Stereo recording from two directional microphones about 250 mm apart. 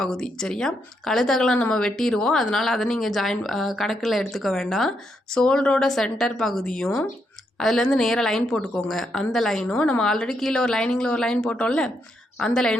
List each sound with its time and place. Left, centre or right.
0.0 s speech: centre